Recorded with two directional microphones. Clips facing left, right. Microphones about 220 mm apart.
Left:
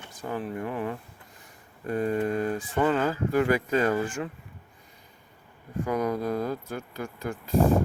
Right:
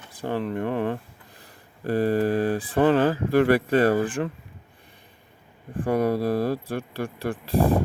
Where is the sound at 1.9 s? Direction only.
35° right (ahead or behind).